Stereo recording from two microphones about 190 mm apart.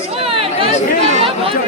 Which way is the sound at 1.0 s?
35° right (ahead or behind).